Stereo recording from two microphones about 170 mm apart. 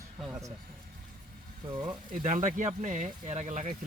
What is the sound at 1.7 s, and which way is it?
Speech, 25° right (ahead or behind).